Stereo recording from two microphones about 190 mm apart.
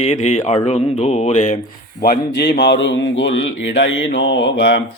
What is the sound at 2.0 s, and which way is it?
A man's voice, 55° left (ahead or behind).